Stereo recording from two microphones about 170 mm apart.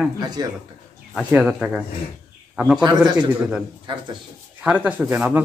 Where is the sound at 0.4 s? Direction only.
25° right (ahead or behind).